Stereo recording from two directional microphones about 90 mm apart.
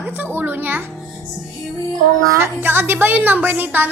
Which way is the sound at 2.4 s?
25° right (ahead or behind).